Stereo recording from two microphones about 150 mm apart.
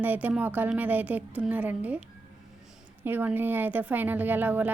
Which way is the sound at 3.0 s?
15° right (ahead or behind).